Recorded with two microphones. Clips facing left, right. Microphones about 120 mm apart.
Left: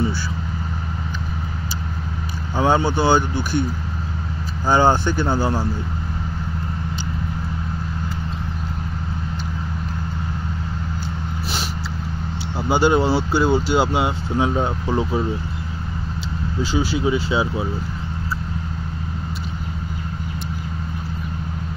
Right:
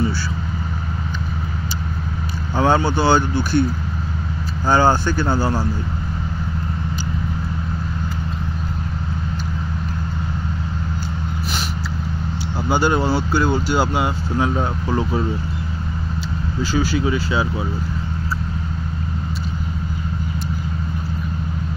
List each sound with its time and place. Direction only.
2.5 s speech: 15° left (ahead or behind)
4.6 s speech: 20° left (ahead or behind)
12.6 s speech: 20° left (ahead or behind)
16.7 s speech: 20° left (ahead or behind)